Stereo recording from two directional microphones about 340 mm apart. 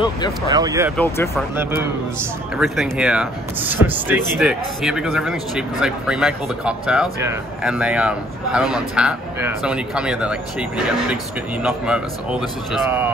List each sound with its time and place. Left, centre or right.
0.5 s speech: centre
0.9 s speech: centre
2.5 s speech: centre
11.6 s speech: centre